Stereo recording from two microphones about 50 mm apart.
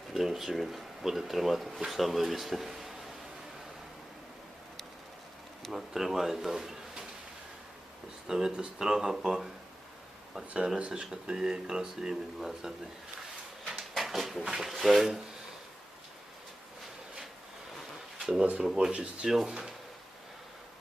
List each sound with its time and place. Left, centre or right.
0.1 s speech: centre
5.7 s speech: centre
8.3 s speech: centre
10.8 s speech: centre
13.7 s a sound: centre
14.5 s speech: centre
18.2 s a sound: centre
18.6 s speech: centre